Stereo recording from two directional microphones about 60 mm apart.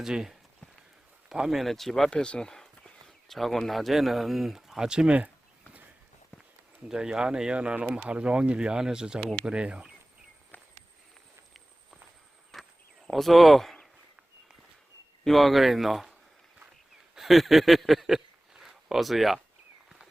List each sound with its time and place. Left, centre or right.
0.0 s speech: centre
2.0 s speech: centre
6.8 s speech: centre
12.5 s a sound: centre
13.1 s speech: centre
15.2 s speech: centre
17.2 s a sound: centre